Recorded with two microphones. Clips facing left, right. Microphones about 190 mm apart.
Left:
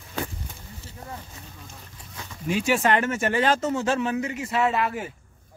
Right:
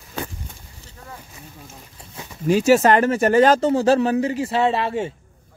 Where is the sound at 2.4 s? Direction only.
40° right (ahead or behind).